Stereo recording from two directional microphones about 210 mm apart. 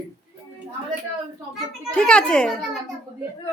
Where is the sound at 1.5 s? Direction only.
5° left (ahead or behind).